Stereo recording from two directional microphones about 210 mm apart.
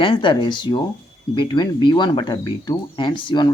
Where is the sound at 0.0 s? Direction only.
25° left (ahead or behind).